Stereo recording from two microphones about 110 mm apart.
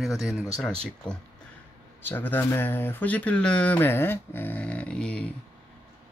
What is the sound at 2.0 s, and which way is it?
Speech, 20° left (ahead or behind).